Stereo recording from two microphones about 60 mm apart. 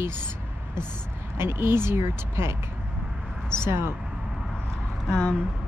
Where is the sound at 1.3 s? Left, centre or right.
Right.